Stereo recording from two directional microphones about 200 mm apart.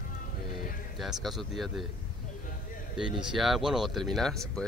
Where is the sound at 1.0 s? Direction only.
Centre (ahead or behind).